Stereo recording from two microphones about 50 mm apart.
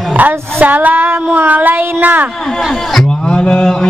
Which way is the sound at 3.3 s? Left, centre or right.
Centre.